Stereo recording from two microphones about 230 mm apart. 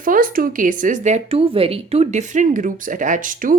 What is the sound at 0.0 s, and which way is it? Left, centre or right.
Speech, right.